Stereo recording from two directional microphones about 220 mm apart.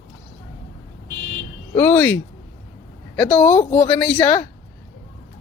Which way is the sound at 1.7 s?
5° left (ahead or behind).